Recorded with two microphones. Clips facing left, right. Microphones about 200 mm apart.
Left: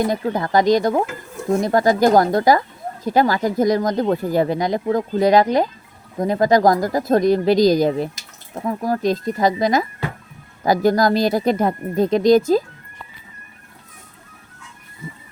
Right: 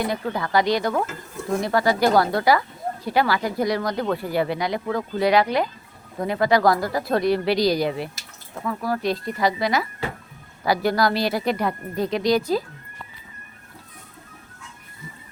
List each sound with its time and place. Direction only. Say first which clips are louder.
0.0 s speech: left 5 dB; 45° left (ahead or behind)